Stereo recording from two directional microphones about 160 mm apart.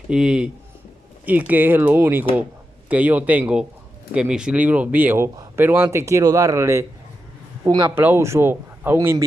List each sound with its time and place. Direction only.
0.1 s speech: 5° right (ahead or behind); by 7.9 s 25° right (ahead or behind)
7.9 s speech: 15° right (ahead or behind)